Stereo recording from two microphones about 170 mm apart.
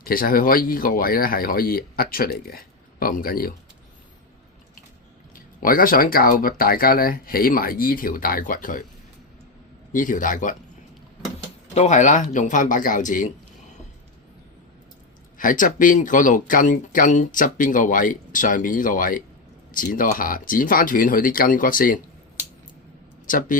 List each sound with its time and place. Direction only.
0.0 s speech: 60° left (ahead or behind)
5.3 s speech: 55° left (ahead or behind)
9.9 s speech: 50° left (ahead or behind)
11.7 s speech: 45° left (ahead or behind)
15.4 s speech: 50° left (ahead or behind)
23.2 s speech: 50° left (ahead or behind)